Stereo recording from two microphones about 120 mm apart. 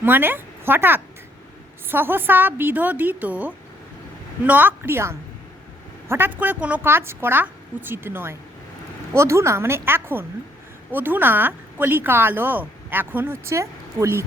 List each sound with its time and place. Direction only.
0.0 s a woman's voice: 15° right (ahead or behind)